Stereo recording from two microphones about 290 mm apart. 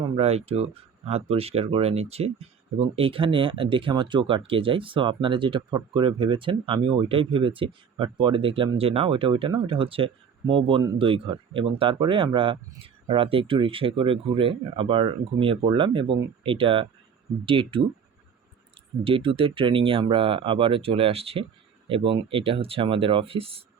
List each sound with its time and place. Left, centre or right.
0.0 s speech: right
19.0 s speech: centre